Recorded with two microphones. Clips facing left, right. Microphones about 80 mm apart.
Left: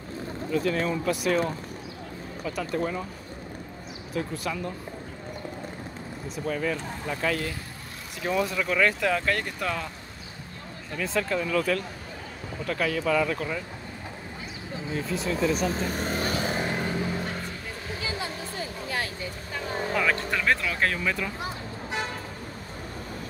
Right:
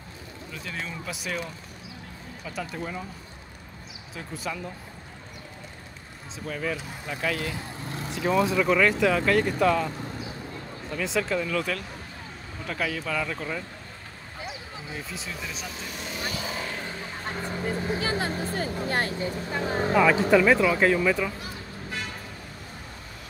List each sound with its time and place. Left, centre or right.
0.5 s speech: centre
2.4 s speech: centre
4.1 s speech: centre
6.4 s speech: centre
11.0 s speech: centre
15.5 s speech: left
18.6 s vehicle: right
20.1 s speech: centre